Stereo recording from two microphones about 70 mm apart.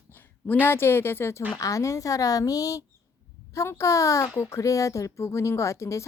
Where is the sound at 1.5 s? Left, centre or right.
Left.